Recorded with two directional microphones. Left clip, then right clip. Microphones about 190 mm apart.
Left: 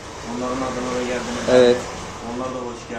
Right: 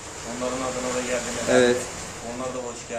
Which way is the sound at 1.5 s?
30° right (ahead or behind).